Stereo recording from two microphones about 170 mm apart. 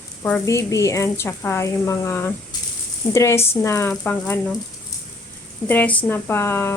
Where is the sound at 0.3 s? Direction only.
15° left (ahead or behind).